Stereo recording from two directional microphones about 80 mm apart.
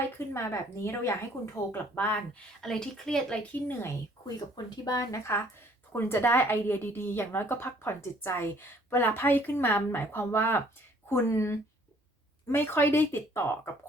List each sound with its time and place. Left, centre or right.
0.3 s a woman's voice: left
1.5 s a woman's voice: left
2.6 s a woman's voice: centre
3.5 s a woman's voice: left
4.5 s speech: left
5.9 s a woman's voice: left